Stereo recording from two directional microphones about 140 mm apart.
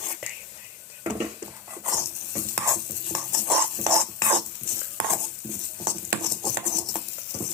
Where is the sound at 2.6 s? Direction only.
20° right (ahead or behind).